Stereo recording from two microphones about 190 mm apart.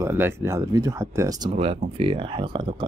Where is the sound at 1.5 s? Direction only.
30° right (ahead or behind).